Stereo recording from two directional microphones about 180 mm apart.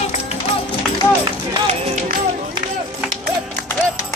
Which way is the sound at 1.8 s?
45° right (ahead or behind).